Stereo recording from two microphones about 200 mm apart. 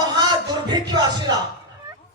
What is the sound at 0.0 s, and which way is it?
Music, 20° right (ahead or behind).